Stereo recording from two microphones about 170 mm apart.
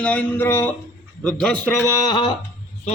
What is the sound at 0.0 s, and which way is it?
A man's voice, 10° left (ahead or behind).